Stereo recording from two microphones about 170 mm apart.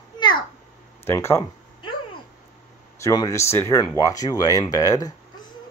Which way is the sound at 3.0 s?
20° left (ahead or behind).